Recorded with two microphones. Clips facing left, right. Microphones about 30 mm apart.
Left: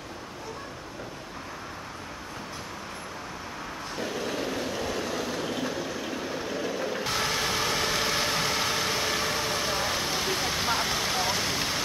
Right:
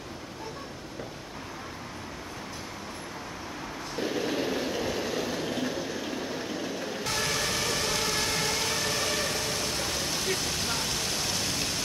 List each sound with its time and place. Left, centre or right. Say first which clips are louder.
4.0 s train: right 2 dB; centre